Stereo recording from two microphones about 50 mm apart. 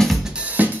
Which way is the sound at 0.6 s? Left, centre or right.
Right.